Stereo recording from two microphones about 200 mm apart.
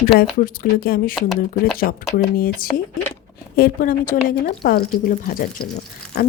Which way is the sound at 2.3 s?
45° left (ahead or behind).